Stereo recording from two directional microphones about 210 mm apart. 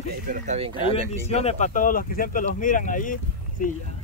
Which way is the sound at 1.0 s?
30° left (ahead or behind).